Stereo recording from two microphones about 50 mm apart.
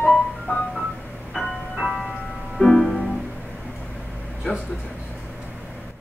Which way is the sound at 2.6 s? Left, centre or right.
Centre.